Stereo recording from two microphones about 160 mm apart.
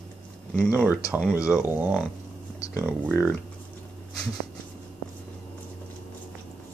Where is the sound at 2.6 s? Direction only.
20° left (ahead or behind).